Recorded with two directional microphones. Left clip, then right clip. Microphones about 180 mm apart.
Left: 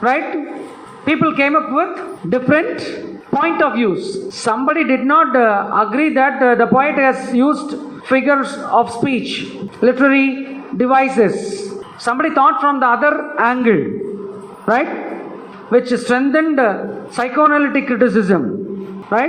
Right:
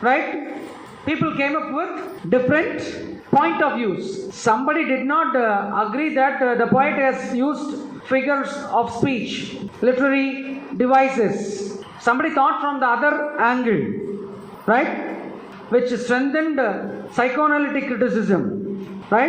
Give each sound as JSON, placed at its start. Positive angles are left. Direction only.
{"t": 1.0, "sound": "a woman's voice", "side_deg": 30}
{"t": 15.7, "sound": "a woman's voice", "side_deg": 30}